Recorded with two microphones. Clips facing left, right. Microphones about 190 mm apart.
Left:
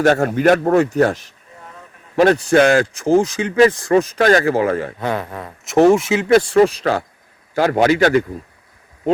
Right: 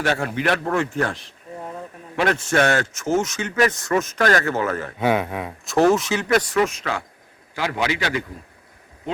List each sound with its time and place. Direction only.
0.0 s a man's voice: 45° left (ahead or behind)
4.9 s speech: 5° right (ahead or behind)
5.6 s a man's voice: 20° left (ahead or behind); by 7.0 s 35° left (ahead or behind)
7.5 s a man's voice: 50° left (ahead or behind)